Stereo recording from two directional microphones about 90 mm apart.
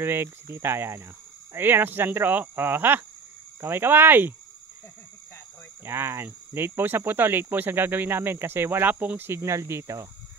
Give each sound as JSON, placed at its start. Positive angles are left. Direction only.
{"t": 0.0, "sound": "speech", "side_deg": -25}
{"t": 5.9, "sound": "speech", "side_deg": -25}